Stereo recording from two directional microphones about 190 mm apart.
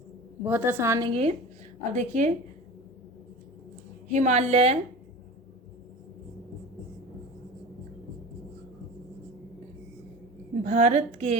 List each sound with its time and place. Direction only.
0.4 s a woman's voice: 10° right (ahead or behind); by 2.3 s 40° right (ahead or behind)
4.1 s a woman's voice: 40° right (ahead or behind)
10.6 s a woman's voice: 40° right (ahead or behind)